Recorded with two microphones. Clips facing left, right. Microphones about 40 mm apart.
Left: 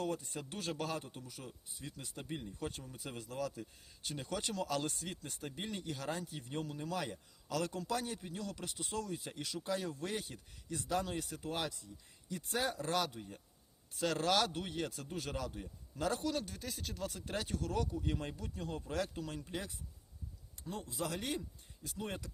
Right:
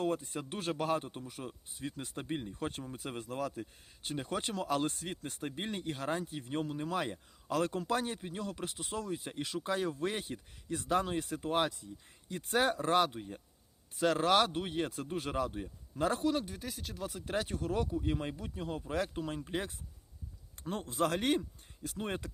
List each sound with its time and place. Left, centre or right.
0.0 s a man's voice: right
16.6 s speech: centre
17.2 s speech: right
19.5 s a man's voice: right